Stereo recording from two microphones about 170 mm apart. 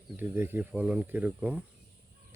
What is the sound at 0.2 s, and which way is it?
Speech, 10° right (ahead or behind).